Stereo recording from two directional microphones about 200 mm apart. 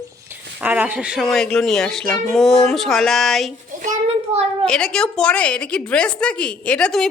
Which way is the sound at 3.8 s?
35° right (ahead or behind).